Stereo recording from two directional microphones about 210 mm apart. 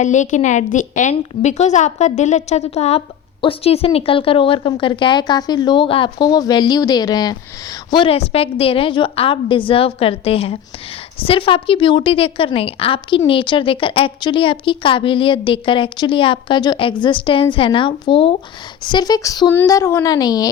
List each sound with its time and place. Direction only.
0.0 s a woman's voice: 35° left (ahead or behind); by 20.5 s 20° left (ahead or behind)